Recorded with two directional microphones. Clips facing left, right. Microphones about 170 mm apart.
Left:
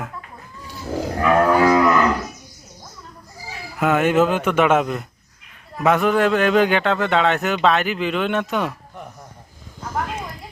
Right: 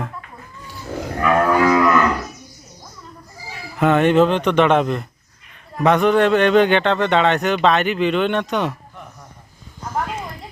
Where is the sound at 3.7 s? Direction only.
5° left (ahead or behind).